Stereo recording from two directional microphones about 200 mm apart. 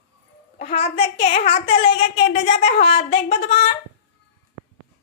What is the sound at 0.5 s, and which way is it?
A child's voice, 30° left (ahead or behind).